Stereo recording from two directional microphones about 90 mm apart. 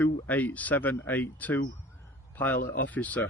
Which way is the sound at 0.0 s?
15° left (ahead or behind).